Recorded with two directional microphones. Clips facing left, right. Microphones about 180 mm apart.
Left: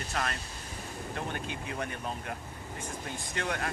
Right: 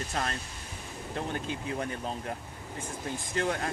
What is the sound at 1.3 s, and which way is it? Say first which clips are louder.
Speech: right 3 dB; 30° right (ahead or behind).